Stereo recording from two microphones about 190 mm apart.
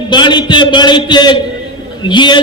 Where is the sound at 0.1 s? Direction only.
25° left (ahead or behind).